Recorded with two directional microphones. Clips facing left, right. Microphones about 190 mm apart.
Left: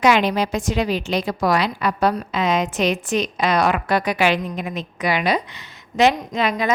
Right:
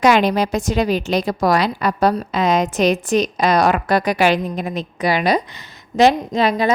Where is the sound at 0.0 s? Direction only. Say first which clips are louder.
Right 3 dB; 40° right (ahead or behind).